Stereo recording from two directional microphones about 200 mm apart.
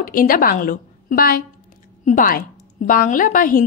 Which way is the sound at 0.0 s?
45° left (ahead or behind).